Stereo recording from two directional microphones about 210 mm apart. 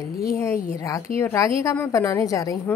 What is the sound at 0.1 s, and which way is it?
Speech, 45° left (ahead or behind).